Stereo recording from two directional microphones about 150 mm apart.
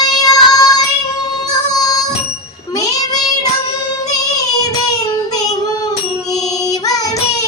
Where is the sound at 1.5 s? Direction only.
25° left (ahead or behind).